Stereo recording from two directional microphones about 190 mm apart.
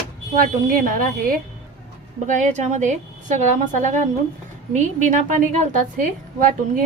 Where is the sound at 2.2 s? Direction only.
40° right (ahead or behind).